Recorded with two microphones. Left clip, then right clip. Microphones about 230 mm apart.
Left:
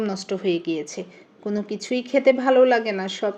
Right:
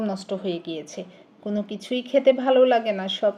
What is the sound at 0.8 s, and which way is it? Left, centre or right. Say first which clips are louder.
A woman's voice: left 4 dB; centre.